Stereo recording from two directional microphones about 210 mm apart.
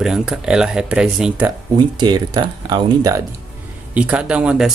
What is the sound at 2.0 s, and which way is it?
Speech, 20° right (ahead or behind).